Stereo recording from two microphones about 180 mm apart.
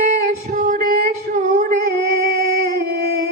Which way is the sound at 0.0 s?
45° right (ahead or behind).